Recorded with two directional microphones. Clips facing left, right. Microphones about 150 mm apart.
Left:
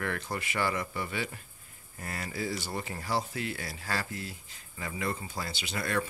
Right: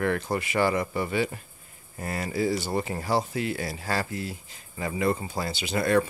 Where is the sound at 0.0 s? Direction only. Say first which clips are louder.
Right 8 dB; 30° right (ahead or behind).